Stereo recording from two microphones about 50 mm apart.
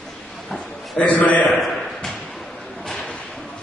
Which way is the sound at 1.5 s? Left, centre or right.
Centre.